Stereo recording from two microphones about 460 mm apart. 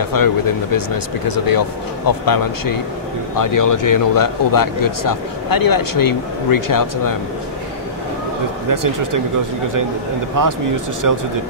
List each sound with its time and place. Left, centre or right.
0.0 s speech: left
8.6 s speech: right
10.4 s speech: right